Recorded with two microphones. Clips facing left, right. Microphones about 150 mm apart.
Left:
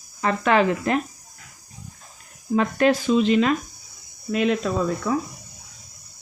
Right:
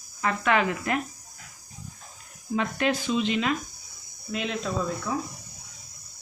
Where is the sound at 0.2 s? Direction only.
35° left (ahead or behind).